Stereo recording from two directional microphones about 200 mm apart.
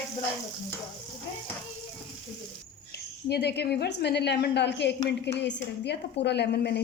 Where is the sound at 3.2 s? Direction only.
55° left (ahead or behind).